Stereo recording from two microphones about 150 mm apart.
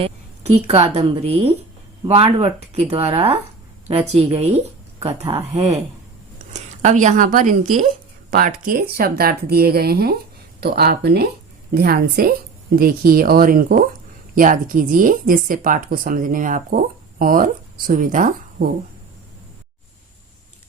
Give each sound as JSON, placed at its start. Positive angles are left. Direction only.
{"t": 0.0, "sound": "a woman's voice", "side_deg": -40}